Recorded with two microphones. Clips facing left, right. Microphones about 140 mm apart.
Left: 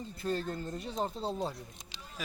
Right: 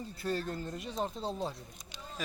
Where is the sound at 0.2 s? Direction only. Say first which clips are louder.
Left 1 dB; 20° left (ahead or behind).